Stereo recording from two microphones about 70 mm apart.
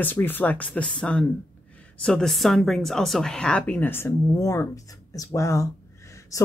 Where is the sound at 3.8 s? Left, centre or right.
Left.